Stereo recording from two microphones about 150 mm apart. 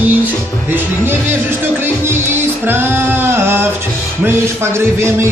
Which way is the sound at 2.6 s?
15° right (ahead or behind).